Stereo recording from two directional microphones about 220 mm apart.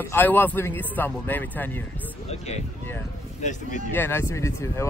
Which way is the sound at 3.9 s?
10° left (ahead or behind).